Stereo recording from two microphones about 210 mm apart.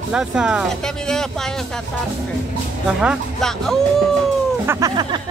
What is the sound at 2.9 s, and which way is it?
Speech, 5° right (ahead or behind).